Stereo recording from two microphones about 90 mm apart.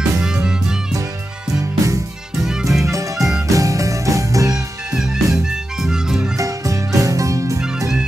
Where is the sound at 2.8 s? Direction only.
35° right (ahead or behind).